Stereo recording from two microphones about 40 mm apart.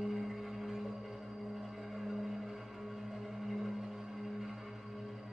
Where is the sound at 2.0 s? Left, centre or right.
Centre.